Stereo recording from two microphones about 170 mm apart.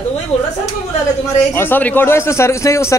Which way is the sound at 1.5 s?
15° left (ahead or behind).